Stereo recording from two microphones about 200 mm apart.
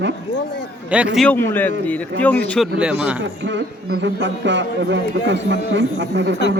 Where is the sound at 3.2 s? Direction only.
65° right (ahead or behind).